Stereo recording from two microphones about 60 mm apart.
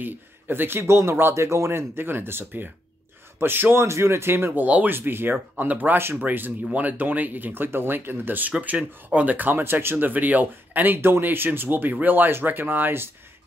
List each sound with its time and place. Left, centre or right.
0.0 s speech: right
1.3 s speech: right